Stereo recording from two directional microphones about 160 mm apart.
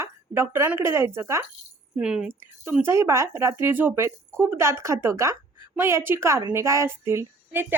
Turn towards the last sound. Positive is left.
turn(degrees=-15)  # may be behind; listen again after turning